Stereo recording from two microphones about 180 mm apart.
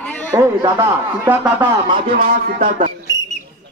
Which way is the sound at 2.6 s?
35° right (ahead or behind).